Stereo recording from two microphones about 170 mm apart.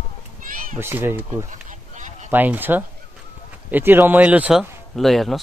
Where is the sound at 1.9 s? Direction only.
45° right (ahead or behind).